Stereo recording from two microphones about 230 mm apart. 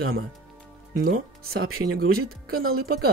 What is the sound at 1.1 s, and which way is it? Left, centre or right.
Speech, right.